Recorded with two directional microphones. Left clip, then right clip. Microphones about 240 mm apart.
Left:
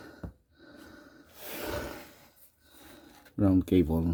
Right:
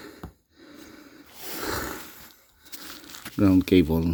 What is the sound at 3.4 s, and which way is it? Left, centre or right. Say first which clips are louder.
Speech: right 6 dB; right.